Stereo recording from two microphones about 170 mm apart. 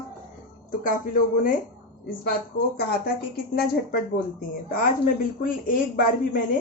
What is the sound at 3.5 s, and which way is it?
A woman's voice, 65° left (ahead or behind).